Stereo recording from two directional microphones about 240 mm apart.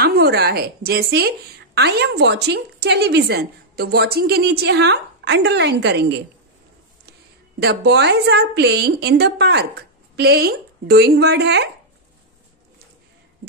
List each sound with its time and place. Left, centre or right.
0.0 s a woman's voice: right
7.6 s a woman's voice: right